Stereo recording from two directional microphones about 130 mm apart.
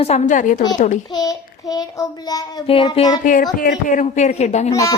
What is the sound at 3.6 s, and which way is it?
Speech, 80° left.